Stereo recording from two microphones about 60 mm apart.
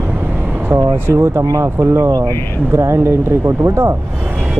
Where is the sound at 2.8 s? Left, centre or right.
Right.